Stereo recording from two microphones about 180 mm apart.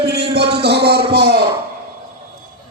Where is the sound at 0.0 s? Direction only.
65° right (ahead or behind).